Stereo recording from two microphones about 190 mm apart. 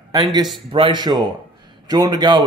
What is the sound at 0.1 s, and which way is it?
Speech, 20° right (ahead or behind).